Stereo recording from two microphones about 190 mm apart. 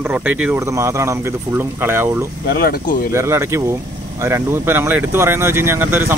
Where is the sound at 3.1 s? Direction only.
15° right (ahead or behind).